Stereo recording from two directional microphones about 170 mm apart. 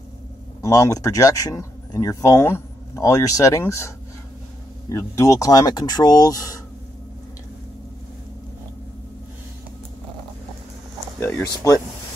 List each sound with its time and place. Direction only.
0.6 s speech: 20° left (ahead or behind)
11.1 s a sound: 15° left (ahead or behind)
11.6 s speech: 20° left (ahead or behind)